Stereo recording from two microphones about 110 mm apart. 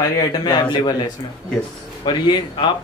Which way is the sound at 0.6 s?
40° left (ahead or behind).